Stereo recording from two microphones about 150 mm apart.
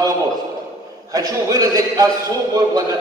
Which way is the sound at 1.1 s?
25° right (ahead or behind).